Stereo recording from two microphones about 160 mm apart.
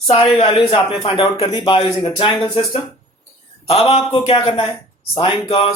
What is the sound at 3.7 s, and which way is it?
Speech, 40° left (ahead or behind).